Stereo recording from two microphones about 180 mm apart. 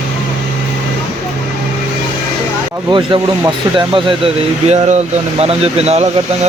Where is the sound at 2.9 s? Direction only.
25° right (ahead or behind).